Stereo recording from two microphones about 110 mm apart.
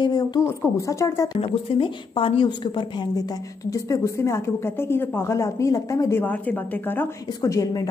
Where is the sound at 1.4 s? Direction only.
50° left (ahead or behind); by 6.2 s 30° left (ahead or behind).